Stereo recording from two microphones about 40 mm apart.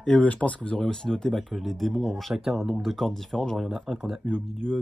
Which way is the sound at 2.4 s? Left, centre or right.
Centre.